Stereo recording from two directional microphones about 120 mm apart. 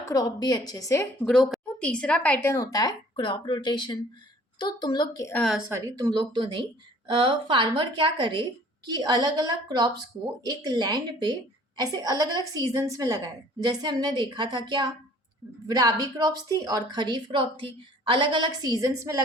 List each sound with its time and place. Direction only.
0.0 s speech: 30° left (ahead or behind)
1.2 s a woman's voice: 5° left (ahead or behind)
2.5 s speech: 30° left (ahead or behind)
5.5 s a woman's voice: 10° right (ahead or behind)
5.7 s a woman's voice: 30° right (ahead or behind)